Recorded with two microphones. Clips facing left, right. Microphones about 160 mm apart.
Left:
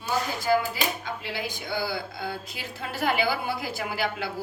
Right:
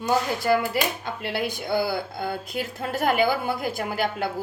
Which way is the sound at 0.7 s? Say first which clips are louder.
Right 4 dB; 60° right (ahead or behind).